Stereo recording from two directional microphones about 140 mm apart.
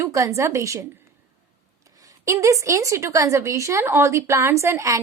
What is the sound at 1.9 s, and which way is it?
A woman's voice, 25° right (ahead or behind).